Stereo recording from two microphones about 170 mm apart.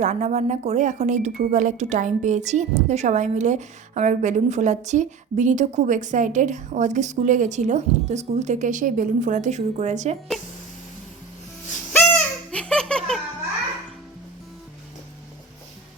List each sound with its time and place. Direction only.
0.0 s a woman's voice: 45° right (ahead or behind)
11.9 s baby laughter: 10° left (ahead or behind)